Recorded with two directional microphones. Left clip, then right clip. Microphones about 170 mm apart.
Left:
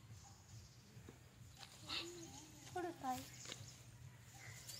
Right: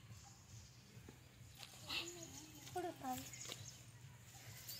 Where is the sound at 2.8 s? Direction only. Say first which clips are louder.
Even; 35° right (ahead or behind).